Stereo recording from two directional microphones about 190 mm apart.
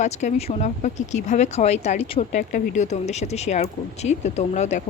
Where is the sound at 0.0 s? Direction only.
35° left (ahead or behind).